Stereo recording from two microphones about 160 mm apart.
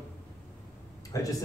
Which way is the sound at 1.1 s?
20° left (ahead or behind).